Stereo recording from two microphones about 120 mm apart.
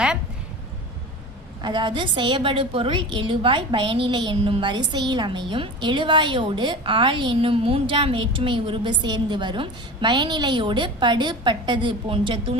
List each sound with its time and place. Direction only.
1.6 s a woman's voice: 40° right (ahead or behind)